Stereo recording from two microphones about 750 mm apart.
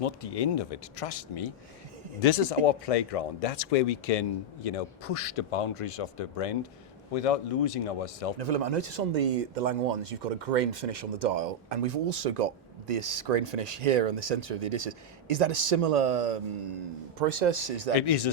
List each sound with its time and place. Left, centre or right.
0.0 s speech: left
8.4 s speech: right
17.2 s speech: right
17.9 s speech: left